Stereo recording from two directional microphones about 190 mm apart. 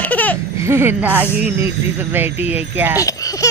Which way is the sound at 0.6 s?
10° right (ahead or behind).